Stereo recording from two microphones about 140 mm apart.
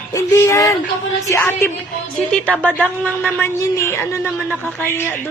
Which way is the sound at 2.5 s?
10° left (ahead or behind).